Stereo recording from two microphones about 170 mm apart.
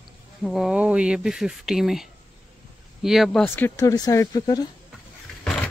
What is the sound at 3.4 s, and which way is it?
Speech, 10° left (ahead or behind).